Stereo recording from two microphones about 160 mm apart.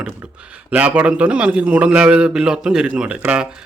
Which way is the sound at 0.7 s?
10° right (ahead or behind).